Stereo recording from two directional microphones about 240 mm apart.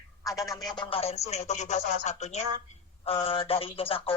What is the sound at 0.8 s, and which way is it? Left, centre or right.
A woman's voice, left.